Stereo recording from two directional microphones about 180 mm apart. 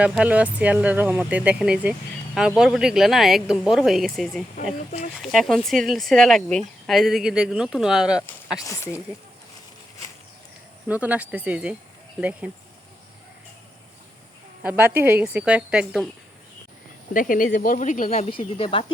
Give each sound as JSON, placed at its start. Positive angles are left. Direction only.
{"t": 0.0, "sound": "speech", "side_deg": -5}
{"t": 8.5, "sound": "speech", "side_deg": 20}
{"t": 10.8, "sound": "speech", "side_deg": -10}
{"t": 14.6, "sound": "speech", "side_deg": -10}
{"t": 17.2, "sound": "speech", "side_deg": 50}